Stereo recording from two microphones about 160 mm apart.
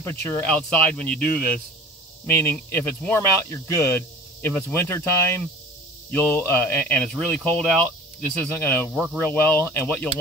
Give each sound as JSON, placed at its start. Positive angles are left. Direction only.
{"t": 0.0, "sound": "speech", "side_deg": 15}